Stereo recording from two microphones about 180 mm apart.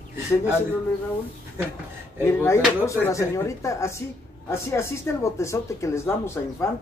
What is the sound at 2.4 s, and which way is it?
Speech, 15° left (ahead or behind).